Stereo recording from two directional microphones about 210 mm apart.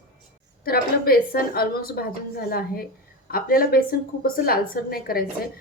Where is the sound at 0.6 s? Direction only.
45° left (ahead or behind).